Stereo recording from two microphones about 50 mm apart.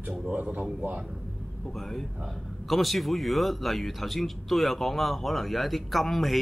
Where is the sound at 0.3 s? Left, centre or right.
Right.